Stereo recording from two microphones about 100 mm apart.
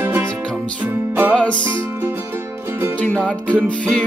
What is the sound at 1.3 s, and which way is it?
Music, 10° left (ahead or behind).